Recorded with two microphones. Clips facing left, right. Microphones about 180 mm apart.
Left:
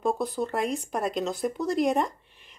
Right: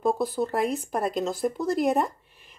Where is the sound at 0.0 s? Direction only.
5° right (ahead or behind).